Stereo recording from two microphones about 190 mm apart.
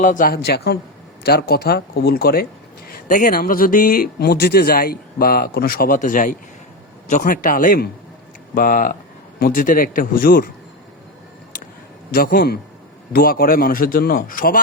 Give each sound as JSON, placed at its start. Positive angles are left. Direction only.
{"t": 0.0, "sound": "speech", "side_deg": 45}
{"t": 12.1, "sound": "speech", "side_deg": 50}